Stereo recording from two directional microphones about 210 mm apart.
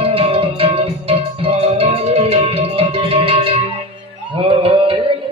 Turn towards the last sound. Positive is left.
turn(degrees=-30)  # may be behind; listen again after turning